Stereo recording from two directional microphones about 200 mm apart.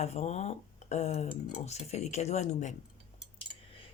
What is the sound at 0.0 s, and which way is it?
Speech, 35° left (ahead or behind).